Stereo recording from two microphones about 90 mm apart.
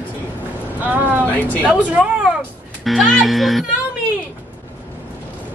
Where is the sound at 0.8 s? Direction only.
20° right (ahead or behind); by 3.7 s centre (ahead or behind).